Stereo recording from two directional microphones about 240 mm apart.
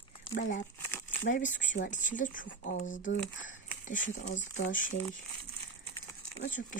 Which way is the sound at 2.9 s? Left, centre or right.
Left.